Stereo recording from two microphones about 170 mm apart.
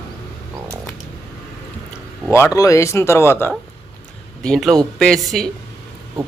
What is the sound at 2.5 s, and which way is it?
Speech, 20° left (ahead or behind).